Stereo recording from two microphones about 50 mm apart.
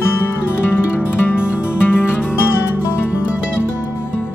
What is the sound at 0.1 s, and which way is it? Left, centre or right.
Music, left.